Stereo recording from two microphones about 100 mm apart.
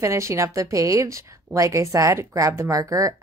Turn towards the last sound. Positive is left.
turn(degrees=-35)  # may be behind; listen again after turning